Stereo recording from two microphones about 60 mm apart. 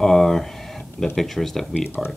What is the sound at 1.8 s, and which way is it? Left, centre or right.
Speech, left.